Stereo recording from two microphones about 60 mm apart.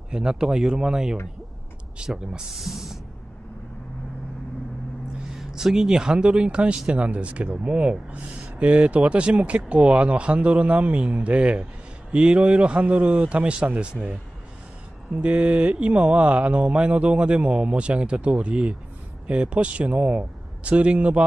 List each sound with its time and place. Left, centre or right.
0.1 s speech: centre
5.3 s speech: centre
15.1 s speech: centre